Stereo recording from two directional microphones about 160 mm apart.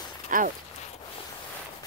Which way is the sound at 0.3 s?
55° right (ahead or behind).